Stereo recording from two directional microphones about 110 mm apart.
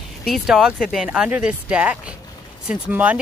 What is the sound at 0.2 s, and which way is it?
Speech, 5° right (ahead or behind).